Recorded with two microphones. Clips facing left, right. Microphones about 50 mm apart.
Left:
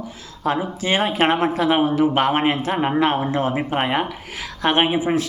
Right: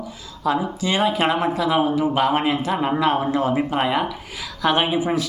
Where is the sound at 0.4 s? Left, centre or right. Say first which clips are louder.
Even; left.